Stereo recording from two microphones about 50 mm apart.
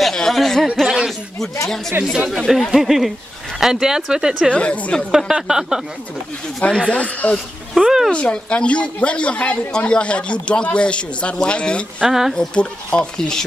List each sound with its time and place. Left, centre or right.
0.0 s a sound: centre
0.8 s a sound: centre
1.4 s speech: centre
4.5 s a man's voice: left
5.1 s speech: centre
6.7 s speech: centre
7.0 s a man's voice: left
7.7 s speech: centre
8.1 s a man's voice: left
12.1 s speech: centre
12.4 s speech: centre